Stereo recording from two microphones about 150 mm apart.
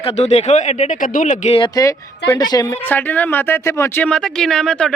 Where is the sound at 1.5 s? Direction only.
30° left (ahead or behind).